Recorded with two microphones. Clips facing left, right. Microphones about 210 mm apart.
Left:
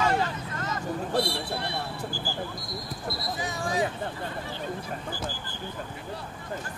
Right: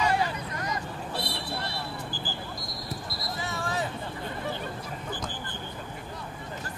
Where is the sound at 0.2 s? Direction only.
15° right (ahead or behind).